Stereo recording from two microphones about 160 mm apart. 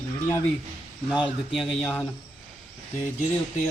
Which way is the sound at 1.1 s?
5° right (ahead or behind).